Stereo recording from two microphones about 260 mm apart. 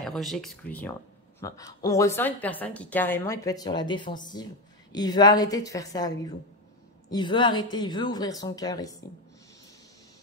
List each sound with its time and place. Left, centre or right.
0.0 s a woman's voice: centre